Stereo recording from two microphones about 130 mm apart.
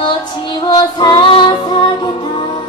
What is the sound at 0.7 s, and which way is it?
Female singing, 35° left (ahead or behind).